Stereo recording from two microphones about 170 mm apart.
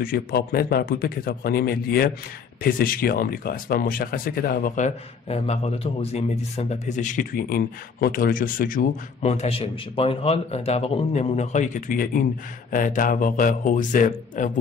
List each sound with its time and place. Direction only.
0.0 s speech: 60° left (ahead or behind)
9.3 s a man's voice: 35° left (ahead or behind)